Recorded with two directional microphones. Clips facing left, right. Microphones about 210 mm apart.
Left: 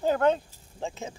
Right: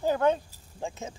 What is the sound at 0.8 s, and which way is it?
Speech, 15° left (ahead or behind).